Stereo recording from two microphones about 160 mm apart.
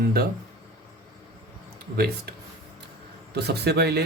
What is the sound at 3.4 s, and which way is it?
Speech, 90° right.